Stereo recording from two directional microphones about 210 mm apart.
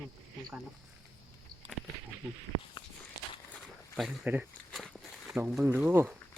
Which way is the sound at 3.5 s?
Centre (ahead or behind).